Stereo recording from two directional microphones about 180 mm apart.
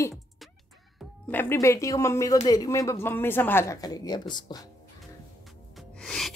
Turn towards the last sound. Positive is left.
turn(degrees=0)  # may be behind; listen again after turning